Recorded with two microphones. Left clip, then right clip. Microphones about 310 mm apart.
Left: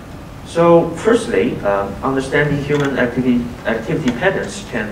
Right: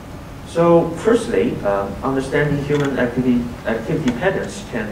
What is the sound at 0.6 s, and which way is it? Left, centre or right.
A man's voice, centre.